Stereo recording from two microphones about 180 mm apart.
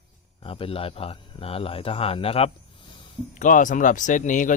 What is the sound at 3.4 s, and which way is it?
Speech, 45° left (ahead or behind).